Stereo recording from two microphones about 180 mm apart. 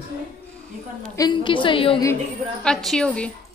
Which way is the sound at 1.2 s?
25° left (ahead or behind).